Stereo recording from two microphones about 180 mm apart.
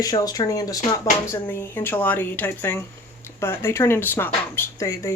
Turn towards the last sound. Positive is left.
turn(degrees=15)  # may be behind; listen again after turning